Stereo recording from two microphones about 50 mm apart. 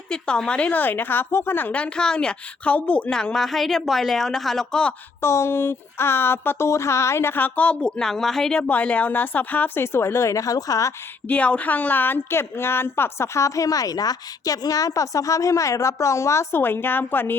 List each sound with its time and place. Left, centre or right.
0.1 s a woman's voice: centre
0.7 s a woman's voice: left
2.0 s a woman's voice: centre
3.1 s a woman's voice: centre
5.2 s a sound: left
6.7 s a sound: left
7.3 s speech: left; by 8.5 s centre
8.5 s speech: left
11.3 s speech: left
12.3 s a sound: left
14.9 s a woman's voice: left
16.6 s a woman's voice: left